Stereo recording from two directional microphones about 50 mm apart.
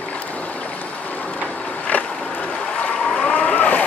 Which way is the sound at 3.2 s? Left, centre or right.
Left.